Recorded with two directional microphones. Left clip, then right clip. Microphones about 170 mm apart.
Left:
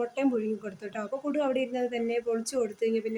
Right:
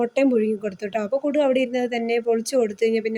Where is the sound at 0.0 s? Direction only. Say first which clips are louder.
Right 9 dB; 30° right (ahead or behind).